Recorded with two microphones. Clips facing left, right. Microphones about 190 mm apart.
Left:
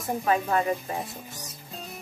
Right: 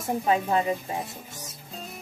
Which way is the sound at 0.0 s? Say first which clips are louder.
Right 1 dB; 20° right (ahead or behind).